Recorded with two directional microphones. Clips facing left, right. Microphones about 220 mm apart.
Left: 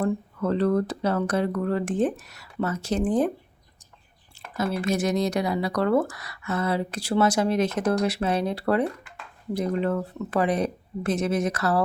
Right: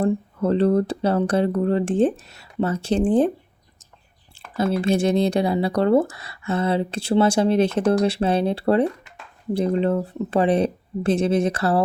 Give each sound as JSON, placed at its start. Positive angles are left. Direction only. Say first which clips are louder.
{"t": 0.0, "sound": "speech", "louder": "right 4 dB", "side_deg": -30}
{"t": 4.8, "sound": "speech", "louder": "right 5 dB", "side_deg": -30}